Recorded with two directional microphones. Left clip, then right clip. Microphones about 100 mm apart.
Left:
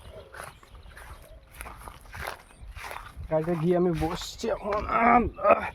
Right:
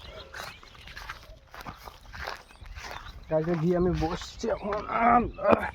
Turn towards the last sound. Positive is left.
turn(degrees=50)  # may be behind; listen again after turning